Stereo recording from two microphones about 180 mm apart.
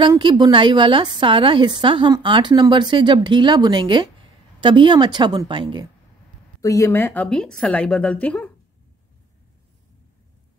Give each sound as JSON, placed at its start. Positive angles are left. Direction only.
{"t": 0.0, "sound": "a woman's voice", "side_deg": -25}
{"t": 6.6, "sound": "a woman's voice", "side_deg": 15}